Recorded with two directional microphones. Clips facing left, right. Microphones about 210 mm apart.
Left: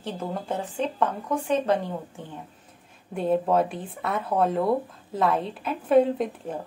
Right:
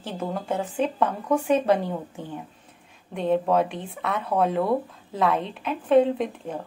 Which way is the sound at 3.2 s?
5° left (ahead or behind).